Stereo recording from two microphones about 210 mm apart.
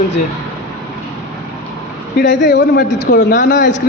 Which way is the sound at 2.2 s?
55° left (ahead or behind).